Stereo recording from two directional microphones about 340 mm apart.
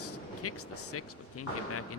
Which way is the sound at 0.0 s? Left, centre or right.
Left.